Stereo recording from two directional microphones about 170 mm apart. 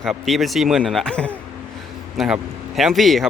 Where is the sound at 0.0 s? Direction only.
Centre (ahead or behind).